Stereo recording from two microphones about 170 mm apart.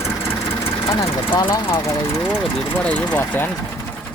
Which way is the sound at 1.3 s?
30° left (ahead or behind).